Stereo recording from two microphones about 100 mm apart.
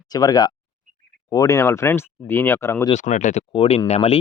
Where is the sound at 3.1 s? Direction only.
90° left.